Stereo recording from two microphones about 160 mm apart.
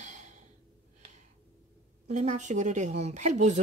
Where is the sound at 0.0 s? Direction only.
50° right (ahead or behind).